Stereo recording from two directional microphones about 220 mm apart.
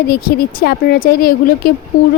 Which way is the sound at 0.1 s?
45° left (ahead or behind).